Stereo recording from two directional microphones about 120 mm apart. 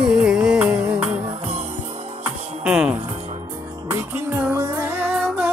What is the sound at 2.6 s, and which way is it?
Music, 10° right (ahead or behind).